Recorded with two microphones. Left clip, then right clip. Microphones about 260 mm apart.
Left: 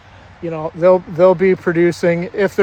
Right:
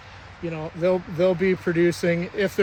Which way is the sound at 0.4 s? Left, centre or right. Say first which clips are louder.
Left 10 dB; centre.